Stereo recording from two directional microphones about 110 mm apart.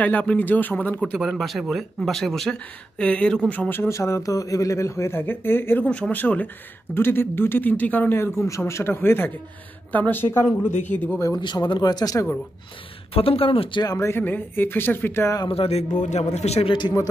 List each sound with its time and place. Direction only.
0.0 s speech: 10° left (ahead or behind)
1.2 s a man's voice: centre (ahead or behind); by 11.1 s 15° left (ahead or behind)
11.1 s speech: 30° left (ahead or behind)
11.4 s speech: 45° left (ahead or behind)
13.1 s speech: 60° left (ahead or behind)
13.8 s a man's voice: 25° left (ahead or behind)
15.5 s speech: 60° left (ahead or behind)
16.0 s speech: 90° left; by 16.7 s 75° left (ahead or behind)